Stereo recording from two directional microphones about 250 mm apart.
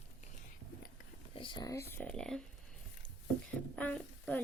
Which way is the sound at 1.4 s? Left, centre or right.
Centre.